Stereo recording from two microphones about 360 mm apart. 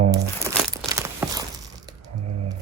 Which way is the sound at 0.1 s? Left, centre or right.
Centre.